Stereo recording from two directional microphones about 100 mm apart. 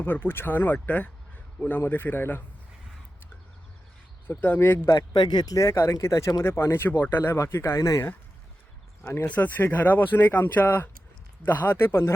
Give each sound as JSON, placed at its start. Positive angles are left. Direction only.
{"t": 0.0, "sound": "a man's voice", "side_deg": 20}
{"t": 4.3, "sound": "speech", "side_deg": 20}
{"t": 4.9, "sound": "speech", "side_deg": 45}
{"t": 5.5, "sound": "speech", "side_deg": 30}
{"t": 9.0, "sound": "speech", "side_deg": 20}